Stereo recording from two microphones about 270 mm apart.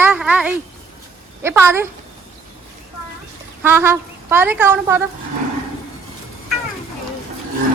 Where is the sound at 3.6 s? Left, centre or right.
Centre.